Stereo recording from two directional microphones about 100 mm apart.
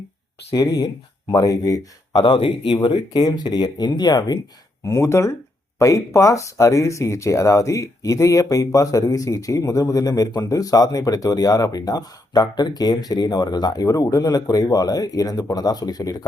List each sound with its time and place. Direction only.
1.3 s speech: 35° left (ahead or behind)
2.2 s speech: 55° left (ahead or behind)
2.8 s speech: 45° left (ahead or behind)
4.8 s speech: 30° left (ahead or behind)